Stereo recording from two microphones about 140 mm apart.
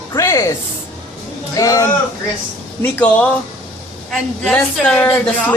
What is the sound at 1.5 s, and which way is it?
Speech, 25° left (ahead or behind).